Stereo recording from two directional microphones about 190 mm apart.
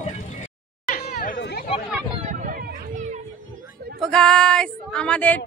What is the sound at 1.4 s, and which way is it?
Chatter, 60° left (ahead or behind).